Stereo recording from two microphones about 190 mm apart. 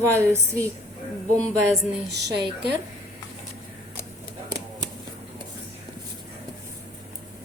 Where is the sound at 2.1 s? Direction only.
65° right (ahead or behind).